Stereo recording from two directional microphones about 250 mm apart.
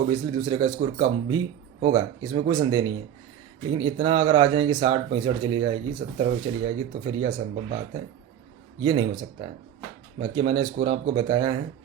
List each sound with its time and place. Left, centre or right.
0.1 s speech: centre
8.8 s speech: centre